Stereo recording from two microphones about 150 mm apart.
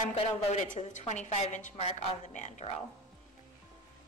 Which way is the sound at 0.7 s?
50° left (ahead or behind).